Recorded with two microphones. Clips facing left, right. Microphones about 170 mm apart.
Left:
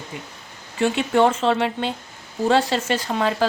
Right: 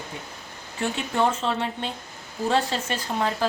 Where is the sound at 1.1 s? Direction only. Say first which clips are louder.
Left 6 dB; 90° left.